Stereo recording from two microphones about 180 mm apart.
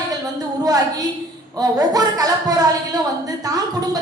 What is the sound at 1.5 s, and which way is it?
A woman's voice, 20° right (ahead or behind).